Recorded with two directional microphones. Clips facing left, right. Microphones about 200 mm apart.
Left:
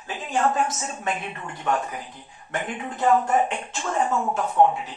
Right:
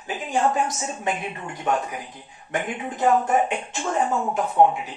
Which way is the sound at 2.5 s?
20° right (ahead or behind).